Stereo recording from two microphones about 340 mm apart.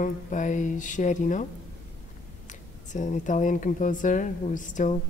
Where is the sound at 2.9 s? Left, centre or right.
Left.